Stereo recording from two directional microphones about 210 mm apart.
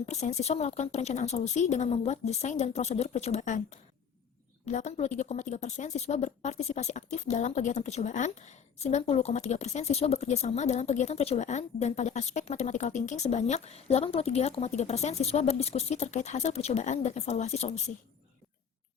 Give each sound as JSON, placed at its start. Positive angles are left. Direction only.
{"t": 0.0, "sound": "a woman's voice", "side_deg": 35}